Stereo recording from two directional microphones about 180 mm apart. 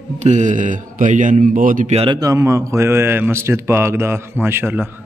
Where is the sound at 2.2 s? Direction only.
20° right (ahead or behind).